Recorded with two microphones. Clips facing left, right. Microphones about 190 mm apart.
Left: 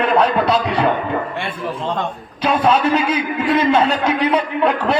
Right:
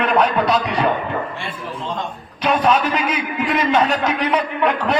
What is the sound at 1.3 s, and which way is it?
Speech, 60° left (ahead or behind).